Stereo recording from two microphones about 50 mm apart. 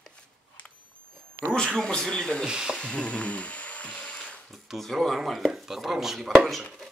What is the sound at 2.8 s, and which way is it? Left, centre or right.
Wood, centre.